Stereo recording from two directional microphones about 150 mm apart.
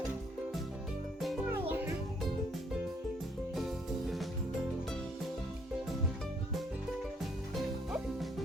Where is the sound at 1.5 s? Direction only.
15° right (ahead or behind).